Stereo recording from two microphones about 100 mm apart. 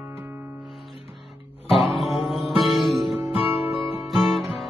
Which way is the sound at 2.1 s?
Centre (ahead or behind).